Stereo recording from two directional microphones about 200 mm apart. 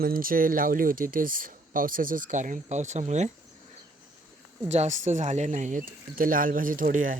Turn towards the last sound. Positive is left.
turn(degrees=-40)  # may be behind; listen again after turning